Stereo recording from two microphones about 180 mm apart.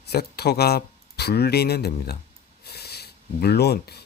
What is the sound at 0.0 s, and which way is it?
Speech, 65° left (ahead or behind).